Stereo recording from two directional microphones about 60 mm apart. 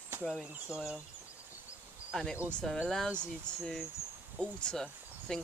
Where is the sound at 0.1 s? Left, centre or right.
Right.